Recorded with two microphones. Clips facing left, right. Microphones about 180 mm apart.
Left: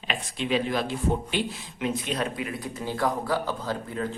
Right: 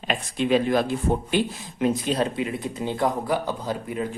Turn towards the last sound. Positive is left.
turn(degrees=-15)  # may be behind; listen again after turning